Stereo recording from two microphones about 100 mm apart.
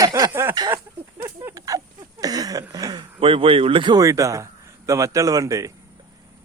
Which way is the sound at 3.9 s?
35° right (ahead or behind).